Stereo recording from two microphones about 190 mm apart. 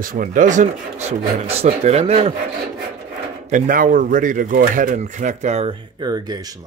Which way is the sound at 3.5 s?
45° right (ahead or behind).